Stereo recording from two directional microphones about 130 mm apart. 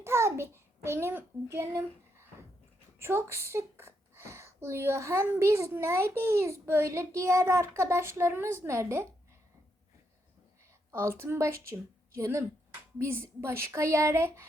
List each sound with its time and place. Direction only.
0.0 s a child's voice: 20° right (ahead or behind)
10.9 s speech: 20° right (ahead or behind)